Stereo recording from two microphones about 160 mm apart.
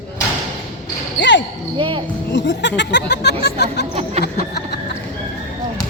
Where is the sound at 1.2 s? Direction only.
90° left.